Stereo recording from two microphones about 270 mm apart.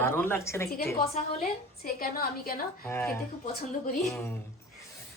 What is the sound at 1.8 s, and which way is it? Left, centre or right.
Speech, left.